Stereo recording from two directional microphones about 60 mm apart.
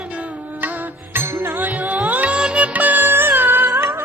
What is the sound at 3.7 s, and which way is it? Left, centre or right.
Music, right.